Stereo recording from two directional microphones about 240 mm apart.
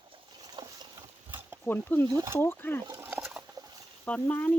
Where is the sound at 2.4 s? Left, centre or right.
Centre.